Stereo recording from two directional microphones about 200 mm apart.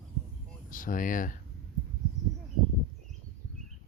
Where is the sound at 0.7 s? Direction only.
40° left (ahead or behind).